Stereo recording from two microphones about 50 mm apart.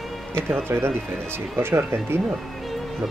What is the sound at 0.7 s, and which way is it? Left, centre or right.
Speech, right.